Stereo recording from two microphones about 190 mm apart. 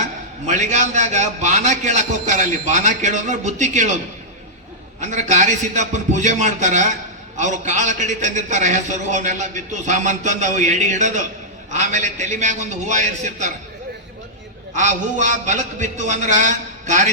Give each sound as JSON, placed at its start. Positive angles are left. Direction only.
{"t": 0.4, "sound": "a man's voice", "side_deg": -40}
{"t": 4.9, "sound": "a man's voice", "side_deg": -40}
{"t": 14.8, "sound": "a man's voice", "side_deg": -40}